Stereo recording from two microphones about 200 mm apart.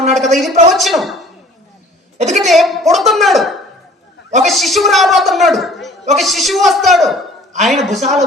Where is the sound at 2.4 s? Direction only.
Centre (ahead or behind).